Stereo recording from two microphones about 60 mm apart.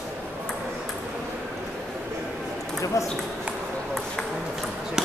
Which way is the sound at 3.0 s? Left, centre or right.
Left.